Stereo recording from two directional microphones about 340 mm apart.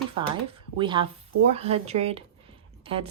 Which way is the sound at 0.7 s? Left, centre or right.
Centre.